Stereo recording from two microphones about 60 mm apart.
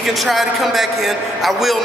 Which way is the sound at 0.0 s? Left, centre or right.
Centre.